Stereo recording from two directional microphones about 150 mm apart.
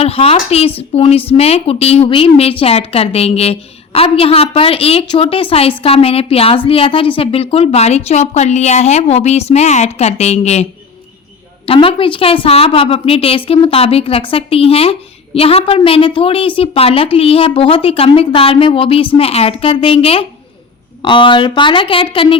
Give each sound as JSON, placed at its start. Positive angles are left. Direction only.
{"t": 0.0, "sound": "a woman's voice", "side_deg": 40}